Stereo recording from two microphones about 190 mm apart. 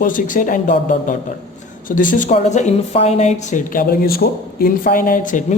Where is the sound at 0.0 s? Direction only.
45° left (ahead or behind).